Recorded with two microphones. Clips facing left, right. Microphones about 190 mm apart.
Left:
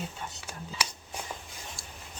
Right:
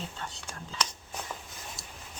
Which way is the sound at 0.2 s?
10° left (ahead or behind).